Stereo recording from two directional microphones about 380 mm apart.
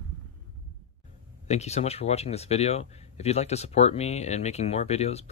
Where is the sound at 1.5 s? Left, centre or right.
Centre.